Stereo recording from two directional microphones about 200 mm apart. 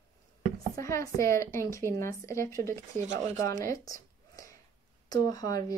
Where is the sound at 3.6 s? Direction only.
15° left (ahead or behind).